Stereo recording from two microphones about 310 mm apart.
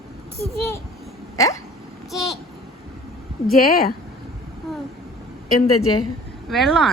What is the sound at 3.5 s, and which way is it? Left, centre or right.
Speech, left.